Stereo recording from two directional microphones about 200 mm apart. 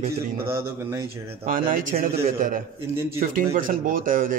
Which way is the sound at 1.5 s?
40° right (ahead or behind).